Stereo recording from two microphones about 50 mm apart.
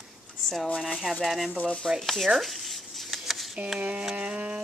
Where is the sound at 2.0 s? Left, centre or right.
Centre.